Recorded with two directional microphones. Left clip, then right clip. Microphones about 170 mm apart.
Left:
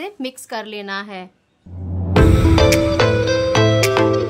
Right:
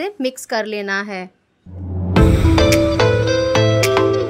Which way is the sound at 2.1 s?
Centre (ahead or behind).